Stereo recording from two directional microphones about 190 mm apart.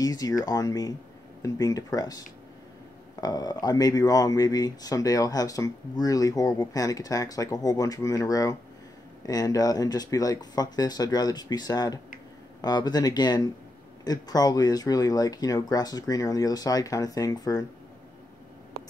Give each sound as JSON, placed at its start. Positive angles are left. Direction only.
{"t": 0.0, "sound": "speech", "side_deg": 20}